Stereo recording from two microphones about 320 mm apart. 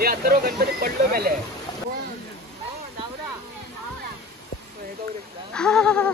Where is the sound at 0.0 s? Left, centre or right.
Right.